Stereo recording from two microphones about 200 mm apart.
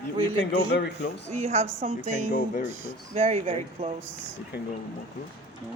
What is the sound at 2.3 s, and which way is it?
Speech, 45° left (ahead or behind).